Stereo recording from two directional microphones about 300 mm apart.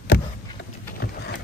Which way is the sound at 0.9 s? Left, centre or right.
Left.